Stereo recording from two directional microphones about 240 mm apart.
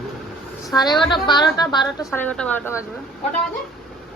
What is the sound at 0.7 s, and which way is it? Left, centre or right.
A woman's voice, centre.